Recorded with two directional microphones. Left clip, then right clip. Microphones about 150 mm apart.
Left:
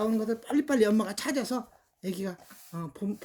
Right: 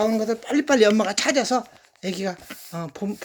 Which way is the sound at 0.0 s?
30° left (ahead or behind).